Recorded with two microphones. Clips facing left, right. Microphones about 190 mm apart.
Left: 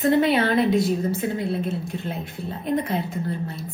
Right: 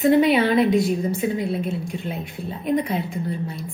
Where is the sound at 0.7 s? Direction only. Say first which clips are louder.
Right 1 dB; centre (ahead or behind).